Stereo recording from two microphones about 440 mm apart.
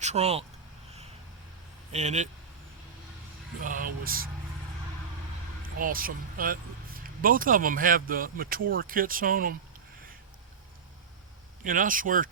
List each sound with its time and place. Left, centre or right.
0.0 s speech: centre
1.9 s speech: centre
3.6 s speech: centre
5.6 s speech: centre
11.6 s speech: centre